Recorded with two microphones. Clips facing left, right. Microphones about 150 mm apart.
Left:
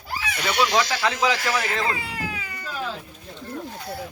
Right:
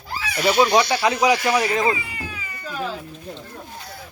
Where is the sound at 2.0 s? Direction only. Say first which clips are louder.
Left 3 dB; 75° left (ahead or behind).